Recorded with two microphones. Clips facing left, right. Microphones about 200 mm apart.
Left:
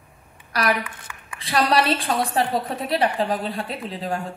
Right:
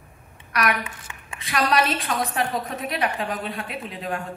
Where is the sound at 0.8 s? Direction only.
25° right (ahead or behind).